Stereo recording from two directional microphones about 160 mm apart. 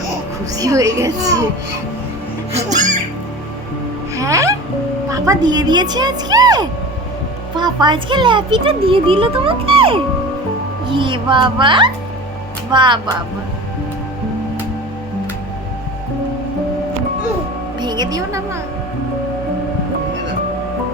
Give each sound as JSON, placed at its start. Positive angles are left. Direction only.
{"t": 0.5, "sound": "speech", "side_deg": -20}
{"t": 2.5, "sound": "speech", "side_deg": -50}
{"t": 4.1, "sound": "music", "side_deg": -20}
{"t": 5.1, "sound": "speech", "side_deg": -20}
{"t": 17.7, "sound": "a woman's voice", "side_deg": -25}